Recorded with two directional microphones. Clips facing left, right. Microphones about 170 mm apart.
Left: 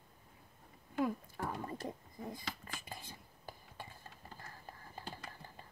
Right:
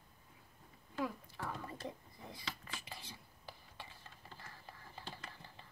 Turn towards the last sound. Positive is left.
turn(degrees=45)  # may be behind; listen again after turning